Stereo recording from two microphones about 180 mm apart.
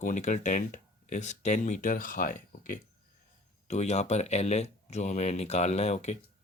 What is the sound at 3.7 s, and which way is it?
Speech, 35° left (ahead or behind).